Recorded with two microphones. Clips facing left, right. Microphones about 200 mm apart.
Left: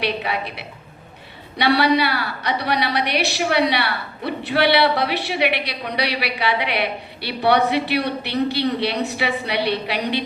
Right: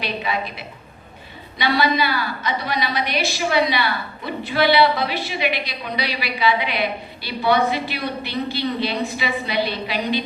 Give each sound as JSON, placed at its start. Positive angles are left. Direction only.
{"t": 0.0, "sound": "a woman's voice", "side_deg": 70}